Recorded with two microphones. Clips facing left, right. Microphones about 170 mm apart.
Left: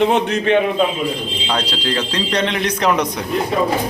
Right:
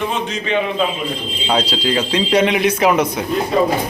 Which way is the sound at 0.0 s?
65° left (ahead or behind).